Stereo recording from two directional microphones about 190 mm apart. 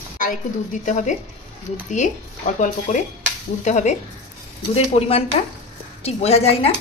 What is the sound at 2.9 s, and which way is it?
Stir, 35° left (ahead or behind).